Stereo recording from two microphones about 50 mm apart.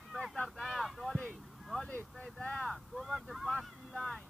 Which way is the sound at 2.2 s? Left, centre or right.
Left.